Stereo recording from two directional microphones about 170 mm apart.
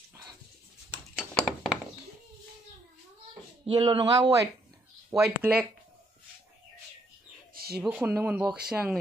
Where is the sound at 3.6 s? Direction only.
30° right (ahead or behind).